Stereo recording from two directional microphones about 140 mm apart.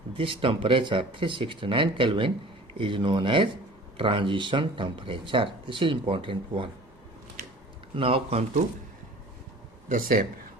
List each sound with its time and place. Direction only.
0.2 s speech: 40° right (ahead or behind)
7.9 s speech: 40° right (ahead or behind)
9.9 s speech: 80° right